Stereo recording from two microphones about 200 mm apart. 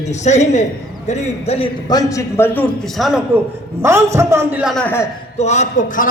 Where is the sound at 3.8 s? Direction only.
15° right (ahead or behind); by 5.1 s 10° left (ahead or behind).